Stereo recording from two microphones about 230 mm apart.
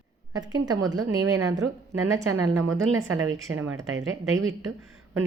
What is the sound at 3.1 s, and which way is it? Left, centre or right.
A woman's voice, right.